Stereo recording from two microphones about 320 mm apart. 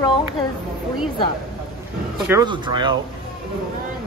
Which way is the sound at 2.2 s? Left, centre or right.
Centre.